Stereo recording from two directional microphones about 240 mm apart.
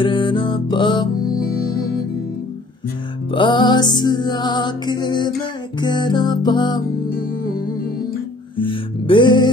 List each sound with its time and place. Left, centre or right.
0.0 s music: left
3.3 s music: centre
8.5 s music: left